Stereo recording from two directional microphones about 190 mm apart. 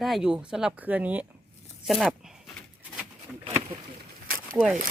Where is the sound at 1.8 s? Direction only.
Centre (ahead or behind).